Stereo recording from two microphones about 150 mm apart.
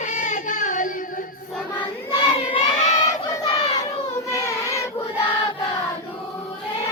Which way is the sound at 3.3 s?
25° left (ahead or behind).